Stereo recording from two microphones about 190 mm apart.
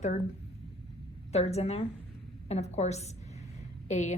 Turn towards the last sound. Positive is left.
turn(degrees=40)  # may be behind; listen again after turning